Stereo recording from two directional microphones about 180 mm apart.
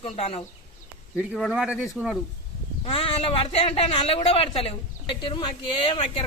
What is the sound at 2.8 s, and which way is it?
Speech, 30° left (ahead or behind).